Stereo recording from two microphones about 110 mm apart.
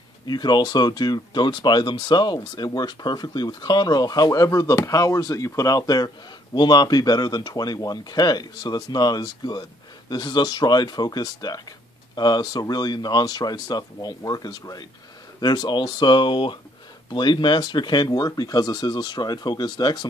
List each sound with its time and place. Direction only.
0.3 s speech: 40° left (ahead or behind)